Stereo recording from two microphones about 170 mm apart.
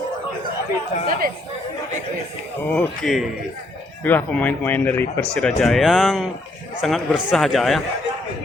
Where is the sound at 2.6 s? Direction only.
10° left (ahead or behind).